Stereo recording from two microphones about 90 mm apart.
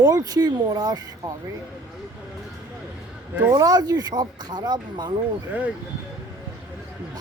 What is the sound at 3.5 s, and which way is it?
Speech, 45° right (ahead or behind).